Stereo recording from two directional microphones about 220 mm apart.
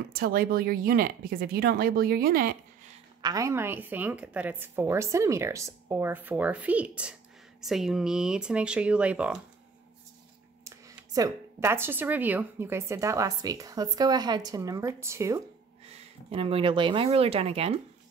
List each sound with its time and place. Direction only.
0.1 s speech: 40° right (ahead or behind)
3.2 s speech: 15° right (ahead or behind)
10.6 s speech: 15° right (ahead or behind)
15.9 s speech: 25° right (ahead or behind)